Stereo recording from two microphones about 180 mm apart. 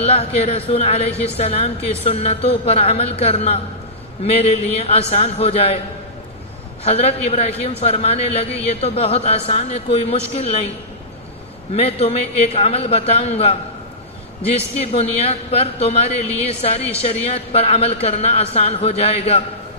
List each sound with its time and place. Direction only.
0.0 s a woman's voice: 35° left (ahead or behind)
6.8 s a woman's voice: 35° left (ahead or behind)
11.7 s a woman's voice: 35° left (ahead or behind)
14.8 s a woman's voice: 35° left (ahead or behind)